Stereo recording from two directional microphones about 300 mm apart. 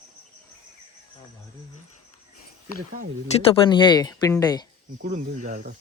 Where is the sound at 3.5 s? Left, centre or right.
Centre.